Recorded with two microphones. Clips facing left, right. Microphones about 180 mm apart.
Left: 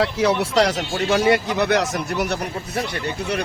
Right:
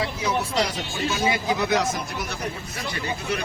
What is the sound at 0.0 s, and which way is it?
Speech, 70° left (ahead or behind).